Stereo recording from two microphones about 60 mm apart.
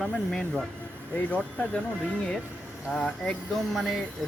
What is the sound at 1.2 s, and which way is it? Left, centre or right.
Speech, left.